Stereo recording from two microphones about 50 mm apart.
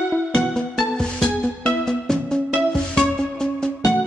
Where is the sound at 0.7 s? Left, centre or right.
Centre.